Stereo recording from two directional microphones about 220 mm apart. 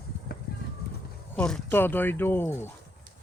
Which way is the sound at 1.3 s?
5° left (ahead or behind).